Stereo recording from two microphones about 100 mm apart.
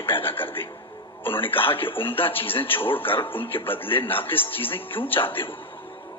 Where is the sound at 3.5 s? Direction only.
60° left (ahead or behind).